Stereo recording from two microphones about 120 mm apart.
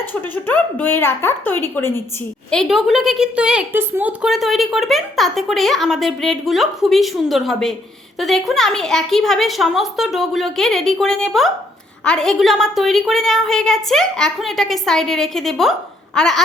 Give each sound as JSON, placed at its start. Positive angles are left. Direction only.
{"t": 0.0, "sound": "a woman's voice", "side_deg": 15}
{"t": 2.5, "sound": "a woman's voice", "side_deg": 0}
{"t": 3.7, "sound": "speech", "side_deg": -20}
{"t": 4.2, "sound": "a woman's voice", "side_deg": 0}